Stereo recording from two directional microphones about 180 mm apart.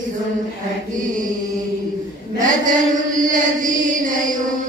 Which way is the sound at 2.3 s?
45° right (ahead or behind).